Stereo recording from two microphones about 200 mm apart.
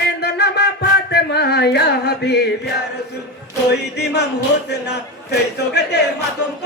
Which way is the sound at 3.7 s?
55° left (ahead or behind).